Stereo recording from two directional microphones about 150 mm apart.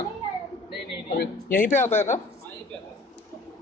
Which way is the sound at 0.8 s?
90° left.